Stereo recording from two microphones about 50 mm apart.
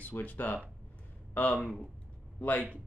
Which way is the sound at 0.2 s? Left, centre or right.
Left.